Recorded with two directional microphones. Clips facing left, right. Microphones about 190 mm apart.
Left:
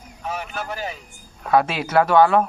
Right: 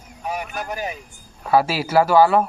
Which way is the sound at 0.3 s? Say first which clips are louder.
Right 1 dB; 15° right (ahead or behind).